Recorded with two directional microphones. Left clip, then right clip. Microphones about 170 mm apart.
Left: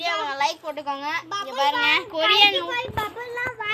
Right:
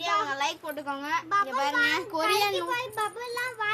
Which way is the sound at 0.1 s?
40° right (ahead or behind).